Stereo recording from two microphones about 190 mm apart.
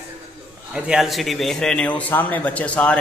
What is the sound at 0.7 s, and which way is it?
A man's voice, 5° right (ahead or behind).